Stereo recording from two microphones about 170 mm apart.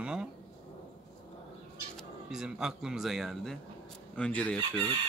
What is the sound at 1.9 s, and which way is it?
Speech, 5° right (ahead or behind).